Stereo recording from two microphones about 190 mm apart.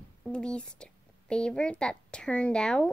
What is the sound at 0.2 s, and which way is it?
A woman's voice, 5° left (ahead or behind).